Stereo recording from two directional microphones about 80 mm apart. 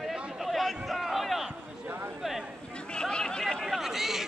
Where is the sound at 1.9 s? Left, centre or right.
Right.